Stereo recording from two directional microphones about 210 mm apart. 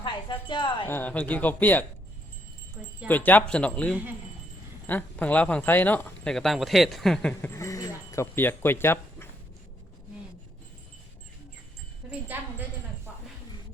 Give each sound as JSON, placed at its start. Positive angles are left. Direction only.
{"t": 0.0, "sound": "music", "side_deg": 20}
{"t": 0.9, "sound": "speech", "side_deg": 10}
{"t": 2.8, "sound": "wind chime", "side_deg": -10}
{"t": 3.1, "sound": "speech", "side_deg": 10}
{"t": 12.0, "sound": "wind chime", "side_deg": -5}